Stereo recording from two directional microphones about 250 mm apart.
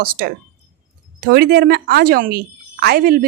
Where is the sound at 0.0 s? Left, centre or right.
Right.